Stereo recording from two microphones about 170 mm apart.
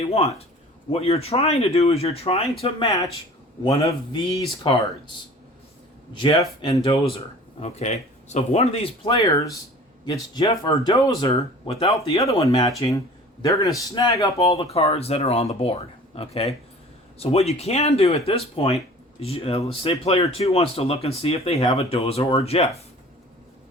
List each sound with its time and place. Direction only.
0.1 s speech: 35° left (ahead or behind)
3.6 s speech: 20° left (ahead or behind)
6.1 s speech: 25° left (ahead or behind)
7.6 s speech: 40° left (ahead or behind)
9.1 s speech: 20° left (ahead or behind)
11.3 s speech: 35° left (ahead or behind)
12.2 s speech: 20° left (ahead or behind); by 22.8 s 35° left (ahead or behind)